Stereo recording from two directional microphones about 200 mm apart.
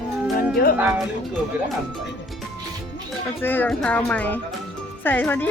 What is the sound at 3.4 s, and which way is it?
Speech, 10° left (ahead or behind).